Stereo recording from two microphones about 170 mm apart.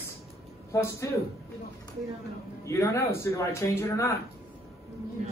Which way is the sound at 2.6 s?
15° left (ahead or behind).